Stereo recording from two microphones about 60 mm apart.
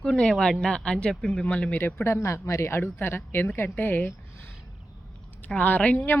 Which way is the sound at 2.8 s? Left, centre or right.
Left.